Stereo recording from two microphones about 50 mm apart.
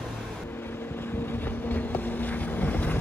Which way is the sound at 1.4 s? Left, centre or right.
Left.